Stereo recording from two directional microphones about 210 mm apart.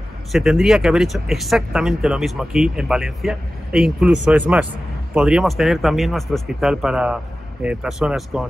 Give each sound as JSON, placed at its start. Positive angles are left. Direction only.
{"t": 0.3, "sound": "speech", "side_deg": 0}